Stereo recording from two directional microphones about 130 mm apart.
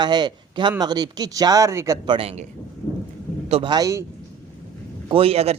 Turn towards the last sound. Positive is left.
turn(degrees=-50)  # may be behind; listen again after turning